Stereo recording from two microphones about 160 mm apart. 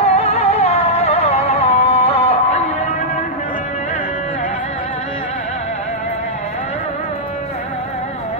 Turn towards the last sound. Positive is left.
turn(degrees=45)  # may be behind; listen again after turning